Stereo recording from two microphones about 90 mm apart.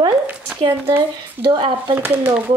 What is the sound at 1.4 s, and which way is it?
Speech, 60° right (ahead or behind).